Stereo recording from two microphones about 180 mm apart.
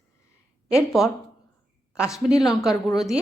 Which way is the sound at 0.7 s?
Centre (ahead or behind).